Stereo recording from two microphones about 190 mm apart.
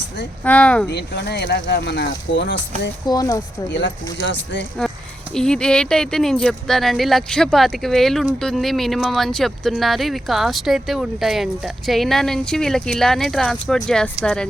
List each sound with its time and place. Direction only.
0.4 s speech: 5° left (ahead or behind)
0.9 s speech: 65° left (ahead or behind)
3.1 s speech: 20° left (ahead or behind)
3.7 s speech: 70° left (ahead or behind)
5.3 s speech: 5° left (ahead or behind)